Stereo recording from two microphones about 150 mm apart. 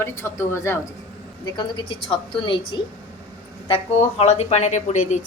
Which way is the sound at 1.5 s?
30° left (ahead or behind).